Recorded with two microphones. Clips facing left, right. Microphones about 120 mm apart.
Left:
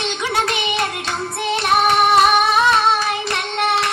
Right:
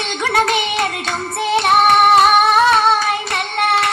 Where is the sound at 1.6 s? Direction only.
55° right (ahead or behind).